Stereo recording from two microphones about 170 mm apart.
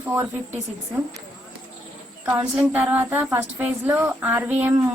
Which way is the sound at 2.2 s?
10° right (ahead or behind).